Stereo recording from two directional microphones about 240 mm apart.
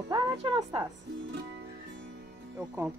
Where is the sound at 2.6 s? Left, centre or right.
Centre.